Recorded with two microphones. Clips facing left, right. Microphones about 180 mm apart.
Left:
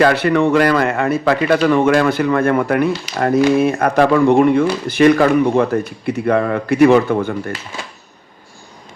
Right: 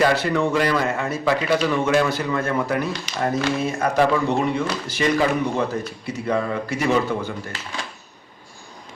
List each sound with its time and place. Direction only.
0.0 s speech: 65° left (ahead or behind)